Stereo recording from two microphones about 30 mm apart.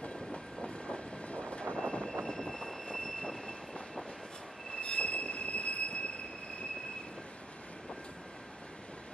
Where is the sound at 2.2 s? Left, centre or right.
Centre.